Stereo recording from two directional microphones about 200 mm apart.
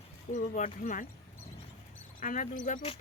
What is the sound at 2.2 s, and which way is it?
Speech, 40° left (ahead or behind).